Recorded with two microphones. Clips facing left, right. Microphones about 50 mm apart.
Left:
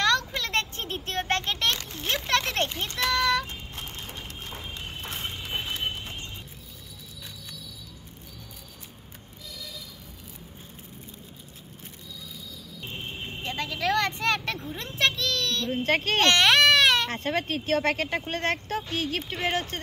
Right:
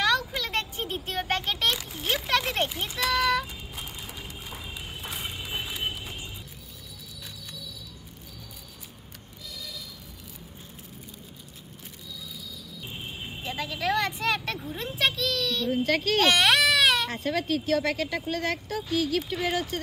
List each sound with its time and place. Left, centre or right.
0.0 s a sound: centre
12.8 s vehicle: centre
14.8 s a sound: centre
15.7 s speech: left
16.3 s baby cry: centre
17.1 s speech: left